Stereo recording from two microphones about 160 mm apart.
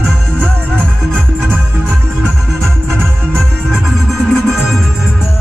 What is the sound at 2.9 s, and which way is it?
Music, 5° left (ahead or behind).